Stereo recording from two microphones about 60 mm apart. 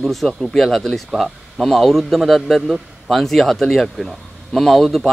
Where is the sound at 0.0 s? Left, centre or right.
Centre.